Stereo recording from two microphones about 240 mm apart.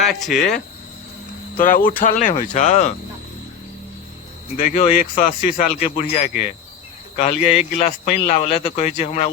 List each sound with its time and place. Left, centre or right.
0.0 s speech: centre
1.5 s speech: left
4.7 s speech: left